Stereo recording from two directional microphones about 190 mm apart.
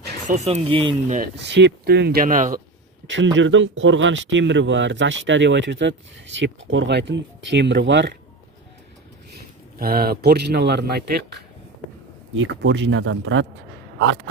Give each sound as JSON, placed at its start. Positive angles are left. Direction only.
{"t": 0.4, "sound": "speech", "side_deg": -35}
{"t": 1.4, "sound": "speech", "side_deg": -65}
{"t": 3.3, "sound": "speech", "side_deg": -80}
{"t": 9.8, "sound": "speech", "side_deg": -50}
{"t": 12.4, "sound": "speech", "side_deg": -70}